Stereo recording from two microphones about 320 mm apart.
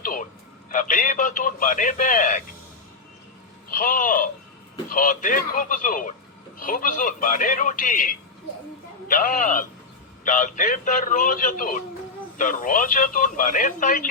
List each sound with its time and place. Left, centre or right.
0.0 s a sound: left
0.7 s speech: left
3.7 s speech: left